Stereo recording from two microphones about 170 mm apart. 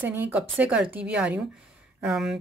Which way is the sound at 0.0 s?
10° right (ahead or behind).